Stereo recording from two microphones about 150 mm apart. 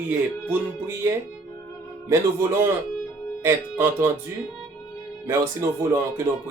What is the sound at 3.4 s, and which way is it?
Speech, 20° right (ahead or behind).